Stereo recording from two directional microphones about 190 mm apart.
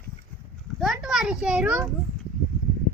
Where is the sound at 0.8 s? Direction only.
Centre (ahead or behind).